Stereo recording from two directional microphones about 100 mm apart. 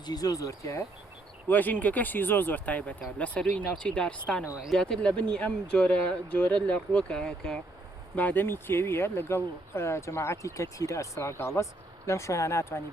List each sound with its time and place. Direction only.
0.0 s speech: 40° left (ahead or behind)
1.5 s speech: 20° left (ahead or behind)
4.4 s speech: 10° right (ahead or behind)
4.7 s speech: 5° left (ahead or behind)
8.1 s speech: 15° left (ahead or behind)